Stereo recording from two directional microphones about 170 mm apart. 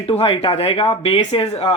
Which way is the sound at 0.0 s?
35° left (ahead or behind).